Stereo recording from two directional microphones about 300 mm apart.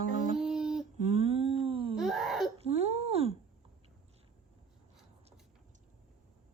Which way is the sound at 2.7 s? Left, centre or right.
Right.